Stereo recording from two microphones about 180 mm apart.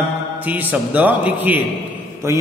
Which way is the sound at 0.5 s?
10° right (ahead or behind).